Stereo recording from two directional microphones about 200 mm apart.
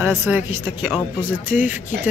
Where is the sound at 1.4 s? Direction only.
40° left (ahead or behind).